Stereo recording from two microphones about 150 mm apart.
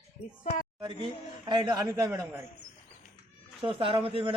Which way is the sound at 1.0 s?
30° right (ahead or behind).